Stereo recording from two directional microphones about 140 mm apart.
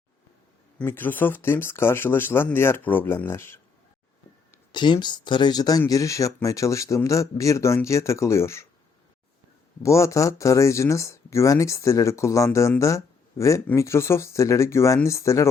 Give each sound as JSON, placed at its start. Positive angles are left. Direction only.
{"t": 0.8, "sound": "speech", "side_deg": 15}
{"t": 4.7, "sound": "speech", "side_deg": 30}
{"t": 9.8, "sound": "speech", "side_deg": 20}